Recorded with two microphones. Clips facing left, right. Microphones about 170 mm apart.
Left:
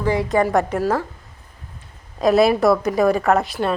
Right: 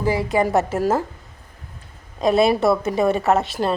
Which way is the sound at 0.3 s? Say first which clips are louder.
Left 1 dB; 25° right (ahead or behind).